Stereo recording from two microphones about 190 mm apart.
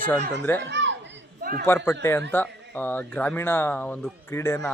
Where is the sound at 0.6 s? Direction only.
70° right (ahead or behind).